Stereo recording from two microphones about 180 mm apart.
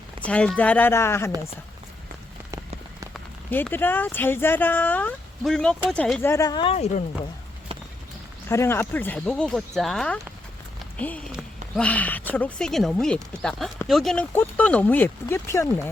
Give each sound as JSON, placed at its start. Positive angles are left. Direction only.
{"t": 0.3, "sound": "speech", "side_deg": 5}
{"t": 3.1, "sound": "speech", "side_deg": 10}
{"t": 8.4, "sound": "speech", "side_deg": 15}